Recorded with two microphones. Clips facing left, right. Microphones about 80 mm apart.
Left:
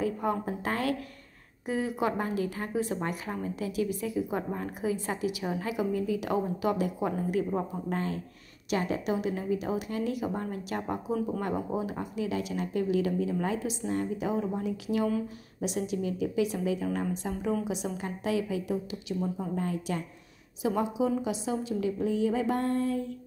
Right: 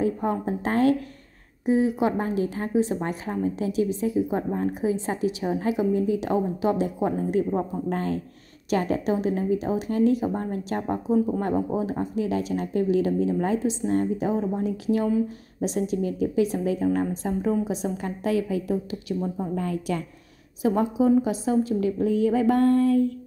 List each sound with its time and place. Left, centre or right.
0.0 s a woman's voice: right
7.9 s a woman's voice: right
17.9 s a woman's voice: right
19.5 s a woman's voice: right
20.6 s a woman's voice: right